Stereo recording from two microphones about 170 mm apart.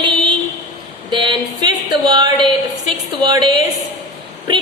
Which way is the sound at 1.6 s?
25° right (ahead or behind).